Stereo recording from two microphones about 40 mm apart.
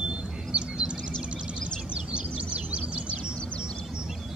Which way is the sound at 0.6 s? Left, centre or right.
Right.